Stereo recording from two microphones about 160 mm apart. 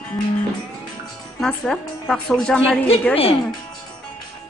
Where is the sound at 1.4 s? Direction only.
5° left (ahead or behind).